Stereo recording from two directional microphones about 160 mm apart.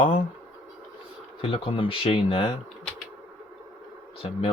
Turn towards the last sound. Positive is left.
turn(degrees=40)  # may be behind; listen again after turning